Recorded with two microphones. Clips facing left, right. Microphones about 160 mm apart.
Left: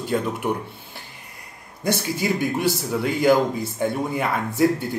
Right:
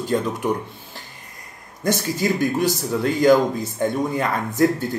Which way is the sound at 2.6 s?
10° left (ahead or behind).